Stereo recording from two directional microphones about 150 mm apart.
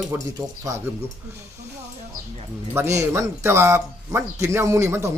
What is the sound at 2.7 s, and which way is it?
Speech, 20° right (ahead or behind).